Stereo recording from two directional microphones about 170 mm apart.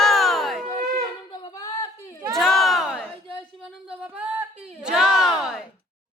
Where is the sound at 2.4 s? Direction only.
Centre (ahead or behind).